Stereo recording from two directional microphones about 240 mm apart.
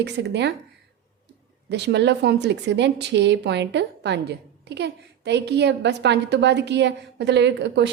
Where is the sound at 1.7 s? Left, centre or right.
Right.